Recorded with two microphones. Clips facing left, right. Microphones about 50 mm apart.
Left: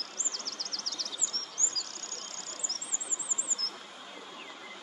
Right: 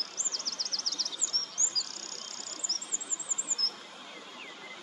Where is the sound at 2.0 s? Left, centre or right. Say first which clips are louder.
Left 1 dB; right.